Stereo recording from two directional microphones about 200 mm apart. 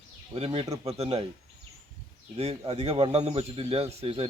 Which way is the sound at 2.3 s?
30° right (ahead or behind).